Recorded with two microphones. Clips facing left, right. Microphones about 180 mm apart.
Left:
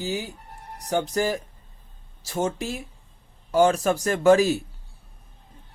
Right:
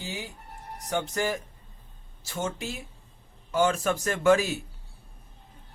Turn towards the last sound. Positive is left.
turn(degrees=35)  # may be behind; listen again after turning